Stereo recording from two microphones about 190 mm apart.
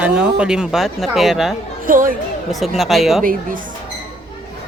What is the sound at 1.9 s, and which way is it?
Speech, 45° right (ahead or behind).